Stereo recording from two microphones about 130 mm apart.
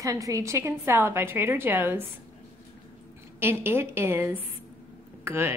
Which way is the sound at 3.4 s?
15° right (ahead or behind).